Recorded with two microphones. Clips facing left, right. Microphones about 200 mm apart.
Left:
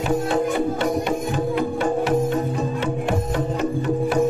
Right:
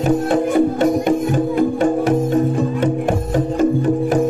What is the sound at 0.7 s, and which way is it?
Music, 45° right (ahead or behind).